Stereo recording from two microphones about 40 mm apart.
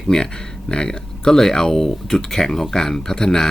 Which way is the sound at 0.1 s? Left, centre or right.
Left.